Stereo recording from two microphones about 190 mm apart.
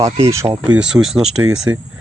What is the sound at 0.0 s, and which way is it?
Speech, 15° right (ahead or behind).